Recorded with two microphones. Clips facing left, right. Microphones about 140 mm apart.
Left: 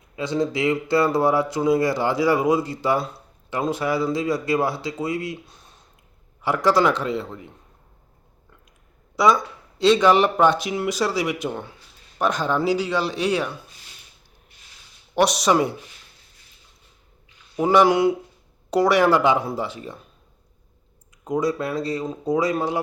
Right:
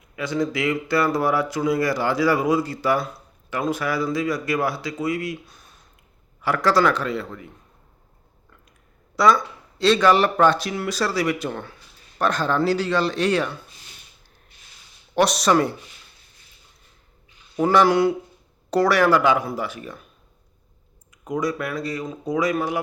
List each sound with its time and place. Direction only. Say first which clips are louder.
0.2 s a man's voice: left 1 dB; 25° left (ahead or behind)
9.1 s speech: even; 15° left (ahead or behind)
15.1 s speech: even; 15° left (ahead or behind)
17.6 s a man's voice: even; 15° left (ahead or behind)
21.2 s a man's voice: left 2 dB; 25° left (ahead or behind)